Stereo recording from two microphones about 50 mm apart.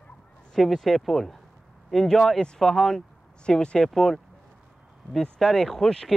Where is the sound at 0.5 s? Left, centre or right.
Centre.